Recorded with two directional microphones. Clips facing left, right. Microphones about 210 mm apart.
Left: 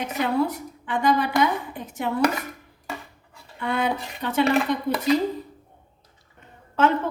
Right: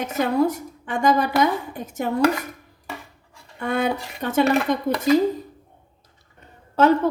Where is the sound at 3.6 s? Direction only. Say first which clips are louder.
Right 2 dB; 45° right (ahead or behind).